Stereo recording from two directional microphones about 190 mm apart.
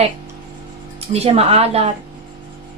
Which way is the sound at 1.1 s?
30° right (ahead or behind).